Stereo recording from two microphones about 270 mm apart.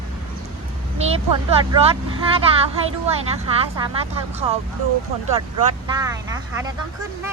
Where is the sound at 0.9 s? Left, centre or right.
Right.